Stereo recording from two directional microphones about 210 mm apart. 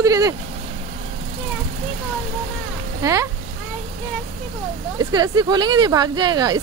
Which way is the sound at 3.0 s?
15° right (ahead or behind).